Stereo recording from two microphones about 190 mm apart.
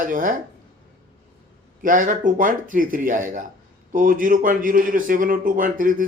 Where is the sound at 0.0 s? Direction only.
45° right (ahead or behind).